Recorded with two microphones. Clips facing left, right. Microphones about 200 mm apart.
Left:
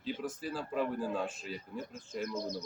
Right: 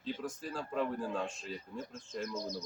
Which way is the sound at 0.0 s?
5° left (ahead or behind).